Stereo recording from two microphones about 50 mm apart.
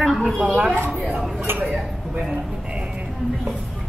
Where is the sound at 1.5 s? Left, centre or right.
Right.